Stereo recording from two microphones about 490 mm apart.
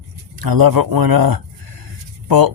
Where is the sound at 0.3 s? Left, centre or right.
Right.